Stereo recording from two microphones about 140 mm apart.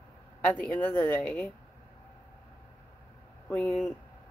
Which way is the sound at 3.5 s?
15° left (ahead or behind).